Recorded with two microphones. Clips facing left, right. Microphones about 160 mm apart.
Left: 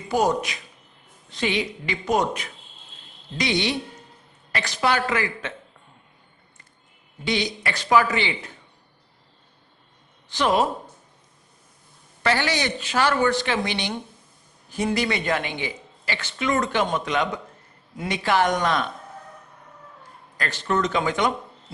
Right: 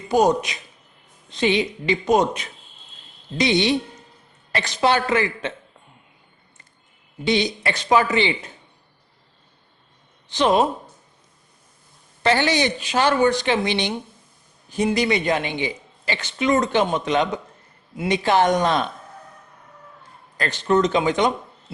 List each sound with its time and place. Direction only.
0.1 s speech: 20° right (ahead or behind)
7.3 s speech: 25° right (ahead or behind)
10.2 s speech: 20° right (ahead or behind)
12.2 s speech: 25° right (ahead or behind)
14.9 s speech: 20° right (ahead or behind)
20.3 s speech: 20° right (ahead or behind)